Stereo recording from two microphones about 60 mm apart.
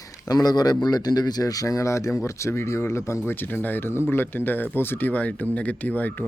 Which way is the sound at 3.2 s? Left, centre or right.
Left.